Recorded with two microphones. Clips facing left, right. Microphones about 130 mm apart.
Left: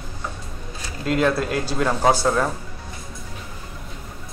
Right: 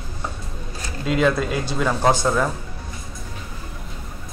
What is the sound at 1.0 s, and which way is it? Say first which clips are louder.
Speech: right 1 dB; 5° left (ahead or behind).